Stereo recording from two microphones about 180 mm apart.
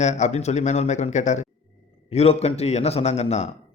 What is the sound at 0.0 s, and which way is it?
A man's voice, 40° left (ahead or behind).